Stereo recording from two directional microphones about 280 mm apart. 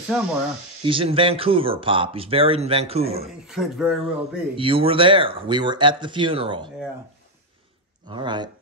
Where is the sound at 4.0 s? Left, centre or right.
Centre.